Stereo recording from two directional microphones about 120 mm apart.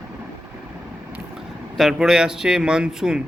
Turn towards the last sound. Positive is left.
turn(degrees=-5)  # may be behind; listen again after turning